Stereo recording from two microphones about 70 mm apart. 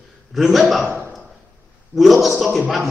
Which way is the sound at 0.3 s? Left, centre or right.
Centre.